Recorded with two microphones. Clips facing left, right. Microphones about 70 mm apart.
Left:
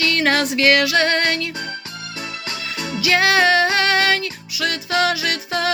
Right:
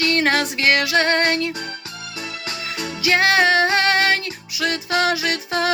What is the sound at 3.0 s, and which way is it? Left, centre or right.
Music, right.